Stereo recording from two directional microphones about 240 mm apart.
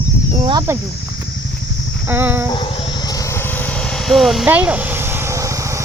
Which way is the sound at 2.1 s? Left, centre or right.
Centre.